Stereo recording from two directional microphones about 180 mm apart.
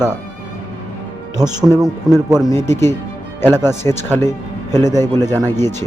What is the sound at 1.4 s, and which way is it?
Speech, 20° right (ahead or behind).